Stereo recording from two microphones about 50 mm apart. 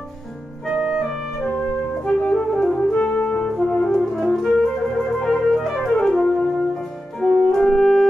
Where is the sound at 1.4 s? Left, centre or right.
Left.